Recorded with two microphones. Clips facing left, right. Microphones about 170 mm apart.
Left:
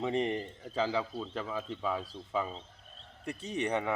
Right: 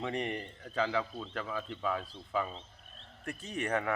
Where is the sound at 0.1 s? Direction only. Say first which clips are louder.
Left 4 dB; 30° left (ahead or behind).